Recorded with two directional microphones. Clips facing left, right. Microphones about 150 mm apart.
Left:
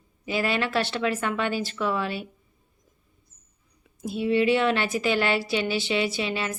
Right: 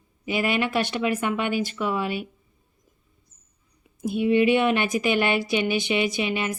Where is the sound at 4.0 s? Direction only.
15° right (ahead or behind).